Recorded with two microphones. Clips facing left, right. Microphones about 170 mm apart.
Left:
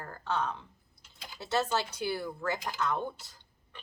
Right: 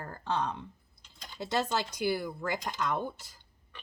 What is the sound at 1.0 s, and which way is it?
Typing, 5° left (ahead or behind).